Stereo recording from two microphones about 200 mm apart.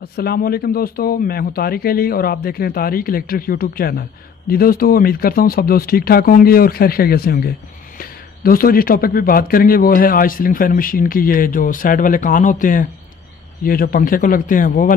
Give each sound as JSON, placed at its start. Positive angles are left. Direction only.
{"t": 0.1, "sound": "speech", "side_deg": 50}